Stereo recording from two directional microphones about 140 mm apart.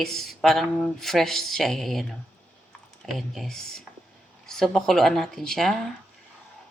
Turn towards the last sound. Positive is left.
turn(degrees=0)  # may be behind; listen again after turning